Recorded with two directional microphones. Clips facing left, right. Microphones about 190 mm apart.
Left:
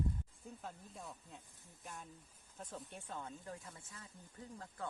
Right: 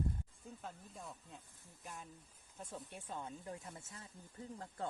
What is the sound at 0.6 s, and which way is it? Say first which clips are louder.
Snake: even; centre (ahead or behind).